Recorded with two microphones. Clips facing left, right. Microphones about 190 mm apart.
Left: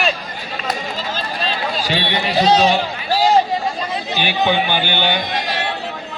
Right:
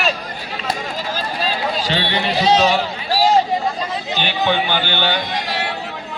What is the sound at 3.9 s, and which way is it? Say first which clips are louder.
A man's voice: left 1 dB; 10° left (ahead or behind).